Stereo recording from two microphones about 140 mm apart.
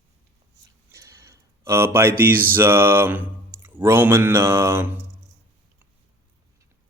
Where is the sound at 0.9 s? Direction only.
20° right (ahead or behind).